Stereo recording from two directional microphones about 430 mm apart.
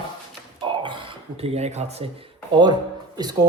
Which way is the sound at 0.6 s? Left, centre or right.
Centre.